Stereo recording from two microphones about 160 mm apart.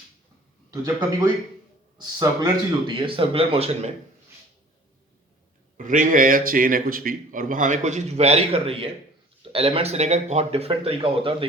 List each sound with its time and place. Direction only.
2.0 s speech: 25° right (ahead or behind)
5.7 s a man's voice: 55° right (ahead or behind); by 11.4 s 35° right (ahead or behind)